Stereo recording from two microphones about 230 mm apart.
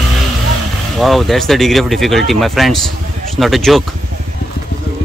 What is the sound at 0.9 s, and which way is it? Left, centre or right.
A man's voice, centre.